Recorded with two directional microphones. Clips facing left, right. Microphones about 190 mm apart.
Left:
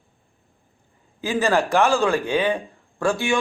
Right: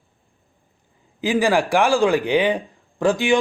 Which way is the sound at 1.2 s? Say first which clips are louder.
Right 2 dB; 15° right (ahead or behind).